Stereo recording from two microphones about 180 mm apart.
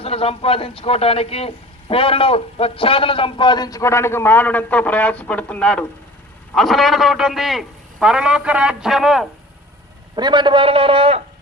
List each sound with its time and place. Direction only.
0.0 s a man's voice: 30° left (ahead or behind); by 9.2 s centre (ahead or behind)
10.2 s a man's voice: 25° right (ahead or behind)